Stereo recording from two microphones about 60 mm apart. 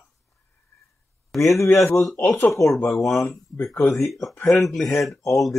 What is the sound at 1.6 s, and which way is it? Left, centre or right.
Speech, left.